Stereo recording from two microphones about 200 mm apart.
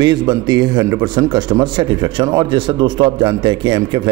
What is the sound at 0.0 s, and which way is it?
A man's voice, 20° right (ahead or behind).